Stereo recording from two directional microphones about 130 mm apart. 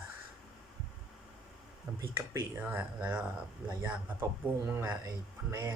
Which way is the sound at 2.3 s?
15° right (ahead or behind).